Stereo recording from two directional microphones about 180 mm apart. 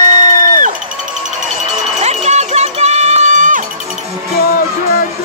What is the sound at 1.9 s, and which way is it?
Music, 40° right (ahead or behind).